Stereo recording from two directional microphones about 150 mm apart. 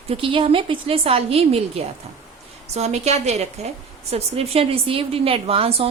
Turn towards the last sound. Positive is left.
turn(degrees=-40)  # may be behind; listen again after turning